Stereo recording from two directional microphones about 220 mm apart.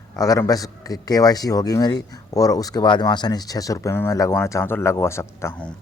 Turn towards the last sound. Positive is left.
turn(degrees=10)  # may be behind; listen again after turning